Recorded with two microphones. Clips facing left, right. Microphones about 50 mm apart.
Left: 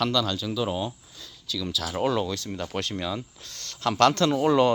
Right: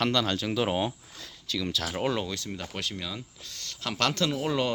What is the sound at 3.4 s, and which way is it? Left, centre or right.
Speech, centre.